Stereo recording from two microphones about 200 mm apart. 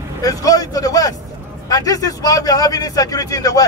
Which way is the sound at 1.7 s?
20° left (ahead or behind).